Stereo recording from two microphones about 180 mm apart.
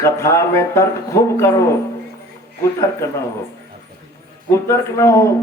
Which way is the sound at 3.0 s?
15° left (ahead or behind).